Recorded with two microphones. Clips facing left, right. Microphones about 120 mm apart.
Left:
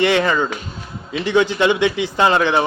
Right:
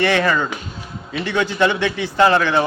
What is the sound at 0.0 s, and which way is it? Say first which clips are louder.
Speech: left 1 dB; 15° left (ahead or behind).